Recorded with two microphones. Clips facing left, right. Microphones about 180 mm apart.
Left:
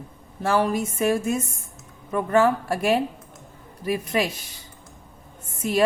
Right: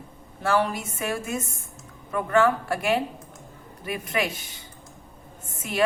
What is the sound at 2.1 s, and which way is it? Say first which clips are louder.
A woman's voice: left 2 dB; 35° left (ahead or behind).